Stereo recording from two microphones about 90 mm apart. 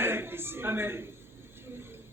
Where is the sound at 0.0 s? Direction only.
25° right (ahead or behind).